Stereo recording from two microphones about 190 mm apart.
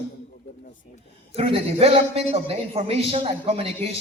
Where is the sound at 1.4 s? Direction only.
30° right (ahead or behind).